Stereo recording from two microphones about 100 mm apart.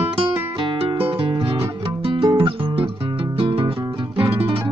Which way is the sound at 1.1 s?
60° right (ahead or behind).